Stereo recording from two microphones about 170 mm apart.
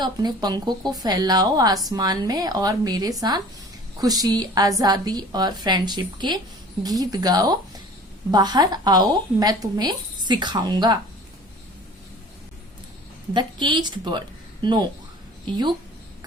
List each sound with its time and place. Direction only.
0.0 s speech: 25° right (ahead or behind)
13.3 s a woman's voice: 25° right (ahead or behind)